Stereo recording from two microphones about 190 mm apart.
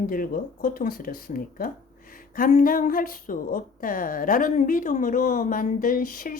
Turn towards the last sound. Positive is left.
turn(degrees=45)  # may be behind; listen again after turning